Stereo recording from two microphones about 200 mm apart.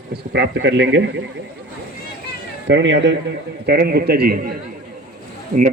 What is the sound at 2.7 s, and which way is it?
Speech, 65° right (ahead or behind).